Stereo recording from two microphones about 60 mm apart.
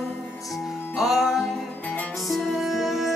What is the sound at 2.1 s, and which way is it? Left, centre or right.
Music, centre.